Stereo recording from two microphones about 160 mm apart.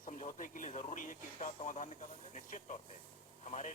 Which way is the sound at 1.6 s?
50° left (ahead or behind).